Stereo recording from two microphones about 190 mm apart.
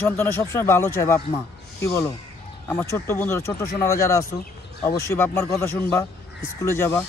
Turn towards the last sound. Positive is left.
turn(degrees=15)  # may be behind; listen again after turning